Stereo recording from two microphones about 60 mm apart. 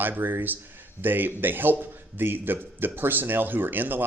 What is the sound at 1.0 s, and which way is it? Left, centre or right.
Speech, right.